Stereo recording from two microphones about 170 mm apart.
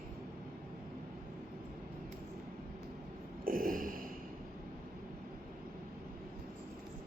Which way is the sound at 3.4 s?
55° right (ahead or behind).